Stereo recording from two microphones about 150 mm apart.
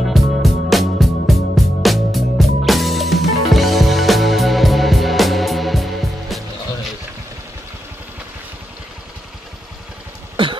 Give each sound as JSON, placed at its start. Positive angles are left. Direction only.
{"t": 0.0, "sound": "music", "side_deg": 0}
{"t": 10.3, "sound": "cough", "side_deg": -35}